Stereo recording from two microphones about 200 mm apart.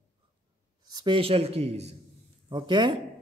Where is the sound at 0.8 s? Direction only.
20° right (ahead or behind).